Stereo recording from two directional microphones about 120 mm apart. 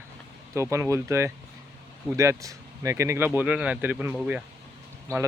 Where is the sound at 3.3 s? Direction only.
10° right (ahead or behind).